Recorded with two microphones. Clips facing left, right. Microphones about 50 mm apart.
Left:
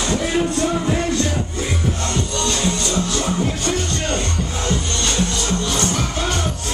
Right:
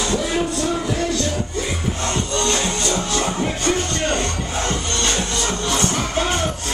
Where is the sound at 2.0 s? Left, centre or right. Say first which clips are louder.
Right 4 dB; right.